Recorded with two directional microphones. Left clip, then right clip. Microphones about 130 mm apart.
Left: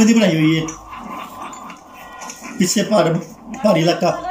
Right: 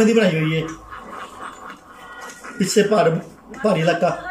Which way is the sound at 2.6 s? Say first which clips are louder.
Even; 15° left (ahead or behind).